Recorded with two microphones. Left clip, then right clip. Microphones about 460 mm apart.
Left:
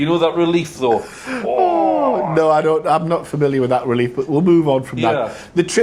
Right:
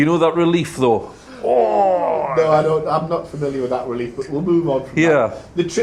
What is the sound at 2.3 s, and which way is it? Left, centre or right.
A man's voice, left.